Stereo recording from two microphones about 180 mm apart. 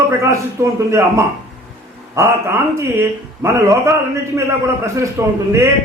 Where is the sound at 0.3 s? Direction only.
15° right (ahead or behind).